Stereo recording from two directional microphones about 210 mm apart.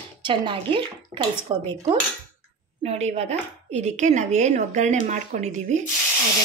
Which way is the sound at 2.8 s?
30° right (ahead or behind).